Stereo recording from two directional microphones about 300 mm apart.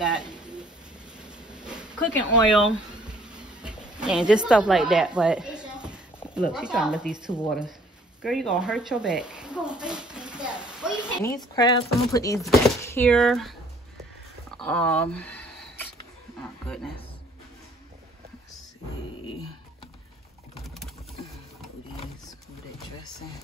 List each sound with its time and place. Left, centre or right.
0.0 s bird: centre
1.1 s vehicle: centre
2.0 s speech: centre
3.4 s a sound: centre
6.3 s speech: centre
10.1 s a sound: centre
11.2 s speech: centre
12.4 s speech: centre
16.6 s speech: centre
20.6 s a sound: centre